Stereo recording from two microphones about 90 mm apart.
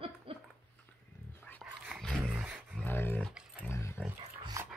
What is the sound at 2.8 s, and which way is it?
Dog, 20° left (ahead or behind).